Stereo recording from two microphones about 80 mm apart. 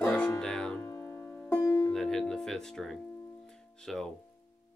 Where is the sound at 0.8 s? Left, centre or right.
Left.